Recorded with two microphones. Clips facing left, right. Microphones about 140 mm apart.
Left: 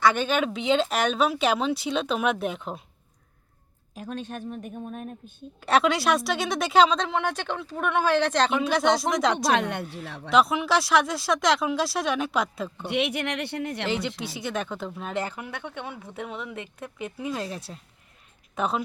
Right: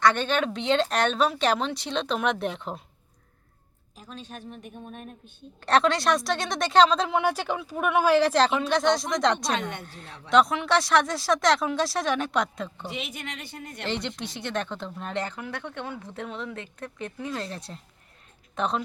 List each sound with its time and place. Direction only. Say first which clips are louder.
0.0 s speech: even; 5° left (ahead or behind)
3.9 s a woman's voice: left 7 dB; 60° left (ahead or behind); by 5.3 s 45° left (ahead or behind)
5.5 s speech: even; 5° left (ahead or behind)
9.5 s speech: left 5 dB; 70° left (ahead or behind)
9.8 s speech: left 7 dB; 5° left (ahead or behind)
12.9 s speech: left 9 dB; 70° left (ahead or behind)
13.8 s a woman's voice: left 3 dB; 5° left (ahead or behind)